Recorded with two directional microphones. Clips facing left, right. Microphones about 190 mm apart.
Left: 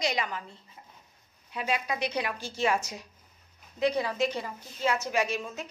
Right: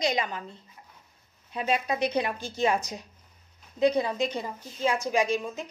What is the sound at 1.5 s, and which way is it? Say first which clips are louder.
A woman's voice: right 3 dB; 25° right (ahead or behind).